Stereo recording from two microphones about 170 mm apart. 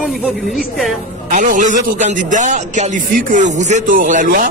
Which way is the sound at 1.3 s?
50° right (ahead or behind).